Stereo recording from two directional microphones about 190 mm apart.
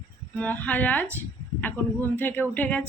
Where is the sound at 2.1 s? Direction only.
10° left (ahead or behind).